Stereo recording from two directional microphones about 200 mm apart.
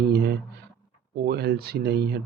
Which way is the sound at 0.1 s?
55° right (ahead or behind).